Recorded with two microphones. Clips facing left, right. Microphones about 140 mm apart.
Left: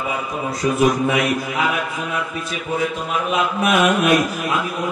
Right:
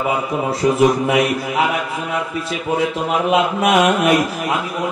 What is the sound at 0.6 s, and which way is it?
Speech, 30° right (ahead or behind).